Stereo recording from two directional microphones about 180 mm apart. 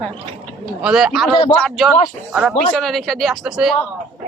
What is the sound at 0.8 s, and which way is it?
Speech, 5° right (ahead or behind).